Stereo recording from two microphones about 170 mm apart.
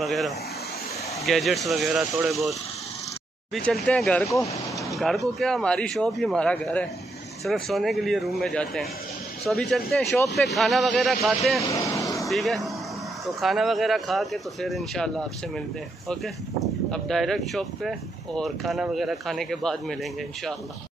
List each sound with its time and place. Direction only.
0.0 s speech: centre (ahead or behind)
3.5 s speech: centre (ahead or behind)
11.7 s vehicle: 20° left (ahead or behind)
12.3 s speech: centre (ahead or behind)
16.9 s speech: centre (ahead or behind)